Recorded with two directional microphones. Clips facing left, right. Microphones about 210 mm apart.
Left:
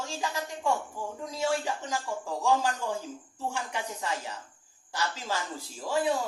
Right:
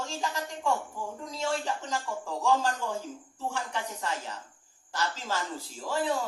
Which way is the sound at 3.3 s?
10° left (ahead or behind).